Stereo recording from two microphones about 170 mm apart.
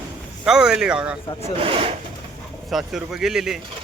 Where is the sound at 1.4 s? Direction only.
35° right (ahead or behind).